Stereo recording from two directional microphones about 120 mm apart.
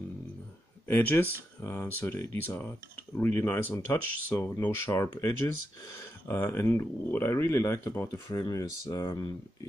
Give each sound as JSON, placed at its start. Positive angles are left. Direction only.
{"t": 0.8, "sound": "speech", "side_deg": 20}
{"t": 6.2, "sound": "speech", "side_deg": 20}
{"t": 8.1, "sound": "speech", "side_deg": 30}